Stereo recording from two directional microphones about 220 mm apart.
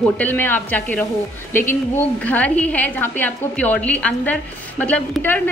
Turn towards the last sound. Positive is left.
turn(degrees=10)  # may be behind; listen again after turning